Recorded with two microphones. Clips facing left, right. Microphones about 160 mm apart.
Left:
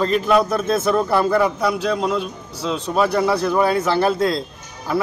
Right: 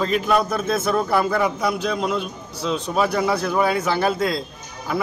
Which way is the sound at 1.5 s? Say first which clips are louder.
Left 2 dB; 10° right (ahead or behind).